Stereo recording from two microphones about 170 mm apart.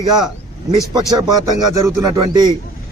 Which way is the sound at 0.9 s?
20° right (ahead or behind).